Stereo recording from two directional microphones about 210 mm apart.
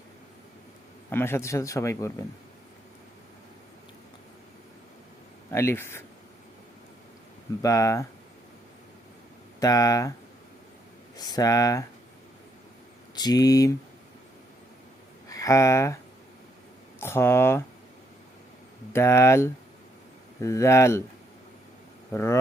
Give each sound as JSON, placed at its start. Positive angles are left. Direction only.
{"t": 1.1, "sound": "speech", "side_deg": 10}
{"t": 5.5, "sound": "speech", "side_deg": 10}
{"t": 7.6, "sound": "speech", "side_deg": 15}
{"t": 9.6, "sound": "speech", "side_deg": 15}
{"t": 11.2, "sound": "speech", "side_deg": 20}
{"t": 13.1, "sound": "speech", "side_deg": 20}
{"t": 15.3, "sound": "speech", "side_deg": 15}
{"t": 17.0, "sound": "speech", "side_deg": 10}
{"t": 18.9, "sound": "speech", "side_deg": 10}
{"t": 22.1, "sound": "speech", "side_deg": 10}